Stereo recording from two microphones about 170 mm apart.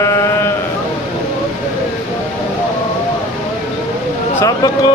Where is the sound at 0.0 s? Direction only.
15° left (ahead or behind).